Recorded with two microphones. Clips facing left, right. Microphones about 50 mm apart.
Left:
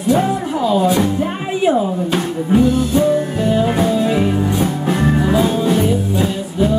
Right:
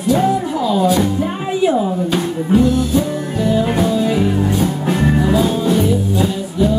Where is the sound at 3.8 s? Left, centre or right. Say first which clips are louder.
Even; left.